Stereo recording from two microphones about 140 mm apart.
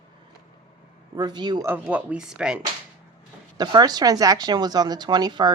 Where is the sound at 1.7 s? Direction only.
10° right (ahead or behind).